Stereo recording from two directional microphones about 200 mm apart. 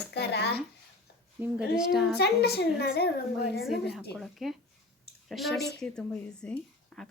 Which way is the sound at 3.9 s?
Centre (ahead or behind).